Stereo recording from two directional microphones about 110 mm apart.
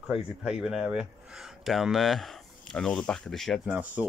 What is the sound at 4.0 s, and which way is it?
Speech, 10° right (ahead or behind).